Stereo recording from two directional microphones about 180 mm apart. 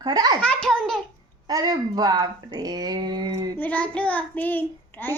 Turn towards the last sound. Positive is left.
turn(degrees=10)  # may be behind; listen again after turning